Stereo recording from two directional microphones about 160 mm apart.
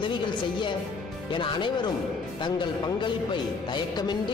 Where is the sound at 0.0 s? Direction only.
30° left (ahead or behind).